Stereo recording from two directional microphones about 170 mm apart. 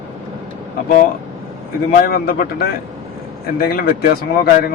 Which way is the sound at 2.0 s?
60° left (ahead or behind).